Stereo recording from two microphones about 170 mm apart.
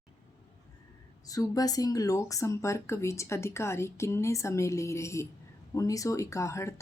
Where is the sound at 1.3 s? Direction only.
20° left (ahead or behind).